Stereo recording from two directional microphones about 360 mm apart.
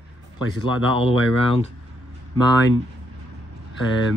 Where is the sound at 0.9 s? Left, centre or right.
Centre.